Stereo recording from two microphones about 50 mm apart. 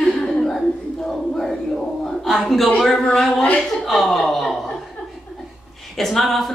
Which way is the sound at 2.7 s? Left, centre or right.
Centre.